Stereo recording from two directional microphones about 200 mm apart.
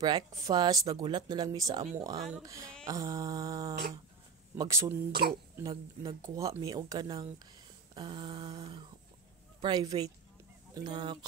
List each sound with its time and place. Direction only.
0.0 s speech: 20° right (ahead or behind)